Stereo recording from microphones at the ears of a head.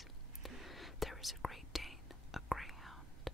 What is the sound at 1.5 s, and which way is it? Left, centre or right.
Whispering, centre.